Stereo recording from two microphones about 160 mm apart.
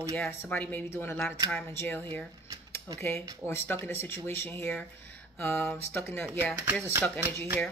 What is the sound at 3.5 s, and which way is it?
Speech, 15° left (ahead or behind).